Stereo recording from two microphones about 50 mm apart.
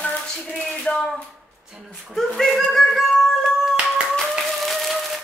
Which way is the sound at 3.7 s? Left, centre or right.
Centre.